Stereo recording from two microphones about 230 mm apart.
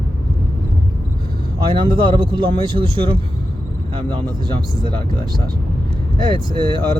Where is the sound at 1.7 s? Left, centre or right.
Right.